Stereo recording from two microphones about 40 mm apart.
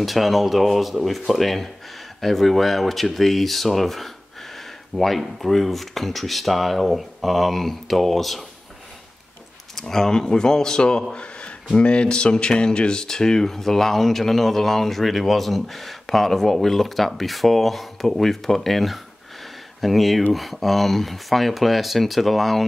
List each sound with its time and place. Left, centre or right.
0.0 s speech: centre
9.8 s speech: centre
11.1 s a sound: left
11.7 s speech: left; by 22.7 s centre